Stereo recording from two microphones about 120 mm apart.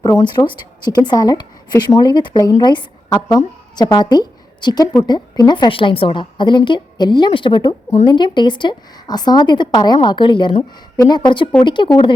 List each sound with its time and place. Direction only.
0.3 s a woman's voice: 40° left (ahead or behind)